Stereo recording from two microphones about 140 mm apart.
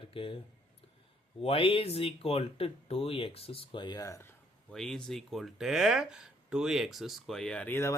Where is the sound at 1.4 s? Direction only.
40° left (ahead or behind); by 4.3 s 25° left (ahead or behind).